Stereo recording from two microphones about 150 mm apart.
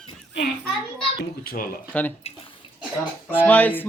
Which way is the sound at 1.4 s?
80° left.